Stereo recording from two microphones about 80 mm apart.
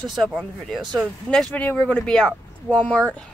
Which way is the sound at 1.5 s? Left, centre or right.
Centre.